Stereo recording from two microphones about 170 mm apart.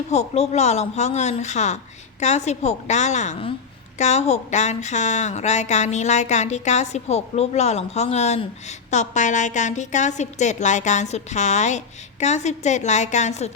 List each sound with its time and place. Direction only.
0.1 s speech: 40° left (ahead or behind)